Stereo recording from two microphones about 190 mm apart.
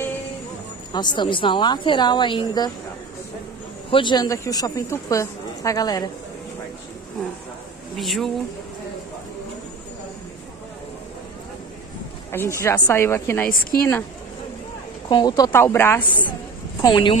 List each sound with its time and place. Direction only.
0.9 s speech: 25° left (ahead or behind)
3.9 s speech: 25° left (ahead or behind)
7.9 s speech: centre (ahead or behind)
12.3 s a woman's voice: 15° left (ahead or behind)
13.5 s a woman's voice: 50° left (ahead or behind)
15.0 s a woman's voice: 20° left (ahead or behind)
16.8 s speech: 20° left (ahead or behind)